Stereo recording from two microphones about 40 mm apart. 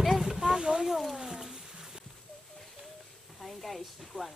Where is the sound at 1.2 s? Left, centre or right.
Centre.